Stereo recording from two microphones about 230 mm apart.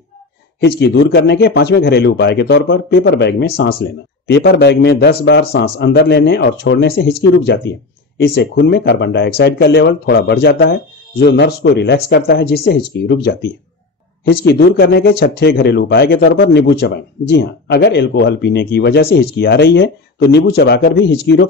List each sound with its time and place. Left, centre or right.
0.6 s speech: left